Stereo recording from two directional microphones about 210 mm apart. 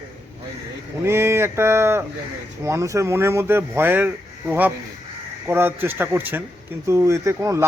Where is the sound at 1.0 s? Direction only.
10° right (ahead or behind).